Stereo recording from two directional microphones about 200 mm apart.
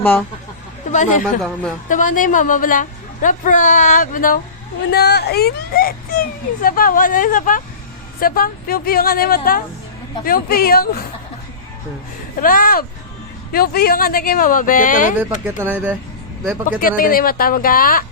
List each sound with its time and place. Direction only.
0.0 s speech: 10° left (ahead or behind)
0.9 s a woman's voice: 40° left (ahead or behind)
4.9 s speech: 55° left (ahead or behind)
12.4 s speech: 45° left (ahead or behind)
15.2 s speech: 10° right (ahead or behind)
16.8 s speech: 45° left (ahead or behind)